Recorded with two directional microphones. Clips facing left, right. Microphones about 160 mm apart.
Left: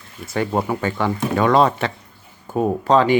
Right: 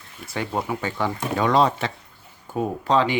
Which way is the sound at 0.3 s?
50° left (ahead or behind).